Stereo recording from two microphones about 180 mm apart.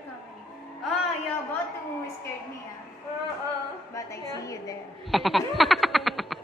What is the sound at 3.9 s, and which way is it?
Speech, 20° left (ahead or behind).